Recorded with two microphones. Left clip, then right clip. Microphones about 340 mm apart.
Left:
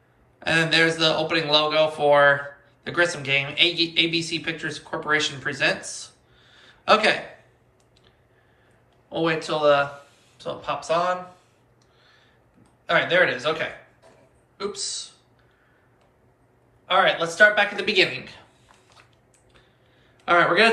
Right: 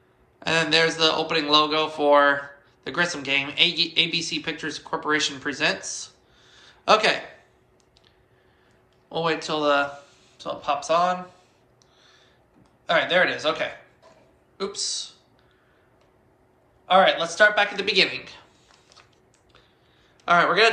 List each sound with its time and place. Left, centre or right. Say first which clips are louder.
0.3 s a man's voice: left 1 dB; centre
6.6 s a sound: even; centre
9.0 s a man's voice: left 1 dB; centre
12.9 s a man's voice: left 1 dB; centre
16.8 s a man's voice: right 2 dB; centre
20.2 s a man's voice: even; centre